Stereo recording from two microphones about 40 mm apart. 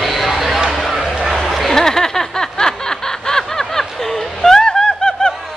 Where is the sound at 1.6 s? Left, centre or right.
Centre.